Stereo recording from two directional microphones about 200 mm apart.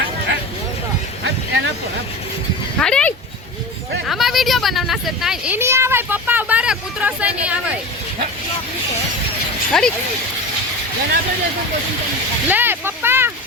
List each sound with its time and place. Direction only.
1.2 s a sound: 70° right (ahead or behind)
2.7 s dog: 5° left (ahead or behind)
4.0 s speech: centre (ahead or behind)
9.7 s speech: 5° left (ahead or behind)
12.5 s speech: 10° right (ahead or behind)